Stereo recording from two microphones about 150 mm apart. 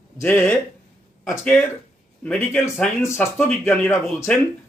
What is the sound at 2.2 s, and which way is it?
A man's voice, 10° left (ahead or behind).